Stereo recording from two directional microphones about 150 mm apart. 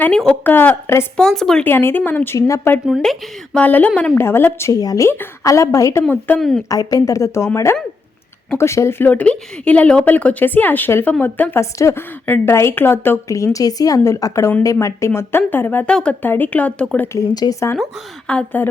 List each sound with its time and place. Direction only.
0.0 s speech: 5° left (ahead or behind)
1.1 s speech: 5° left (ahead or behind)
2.8 s speech: centre (ahead or behind)
6.4 s a woman's voice: centre (ahead or behind)
6.7 s a woman's voice: 25° left (ahead or behind); by 17.1 s 5° left (ahead or behind)
17.2 s a woman's voice: 25° left (ahead or behind)
18.3 s speech: 10° left (ahead or behind)